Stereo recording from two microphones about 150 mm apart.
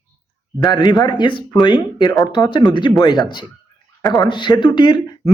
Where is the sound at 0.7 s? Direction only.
30° left (ahead or behind).